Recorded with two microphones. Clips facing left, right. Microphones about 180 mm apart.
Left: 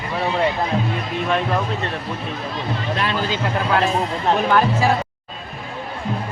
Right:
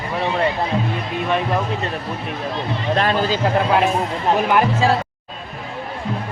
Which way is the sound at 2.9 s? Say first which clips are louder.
Right 6 dB; 45° right (ahead or behind).